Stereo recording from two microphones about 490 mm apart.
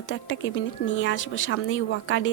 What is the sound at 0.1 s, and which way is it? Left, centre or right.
Speech, left.